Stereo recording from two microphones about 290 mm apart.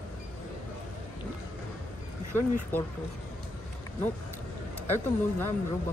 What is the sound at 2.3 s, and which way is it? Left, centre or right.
Speech, centre.